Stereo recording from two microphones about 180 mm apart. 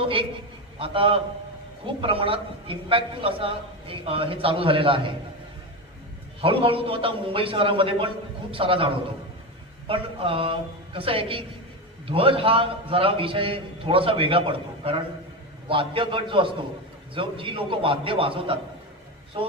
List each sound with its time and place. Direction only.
0.0 s a man's voice: 30° right (ahead or behind)
6.4 s a man's voice: 30° right (ahead or behind)